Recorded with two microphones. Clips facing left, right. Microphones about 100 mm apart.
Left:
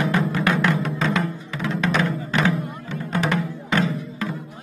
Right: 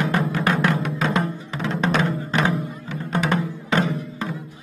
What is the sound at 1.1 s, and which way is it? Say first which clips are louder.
Music: even; 40° right (ahead or behind).